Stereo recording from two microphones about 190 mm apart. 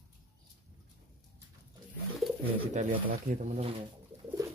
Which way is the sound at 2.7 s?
40° right (ahead or behind).